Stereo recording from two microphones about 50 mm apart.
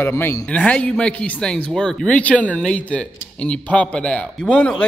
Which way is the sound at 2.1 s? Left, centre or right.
Left.